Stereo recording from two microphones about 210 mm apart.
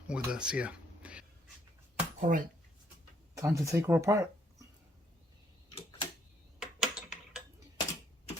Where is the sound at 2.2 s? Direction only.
35° right (ahead or behind).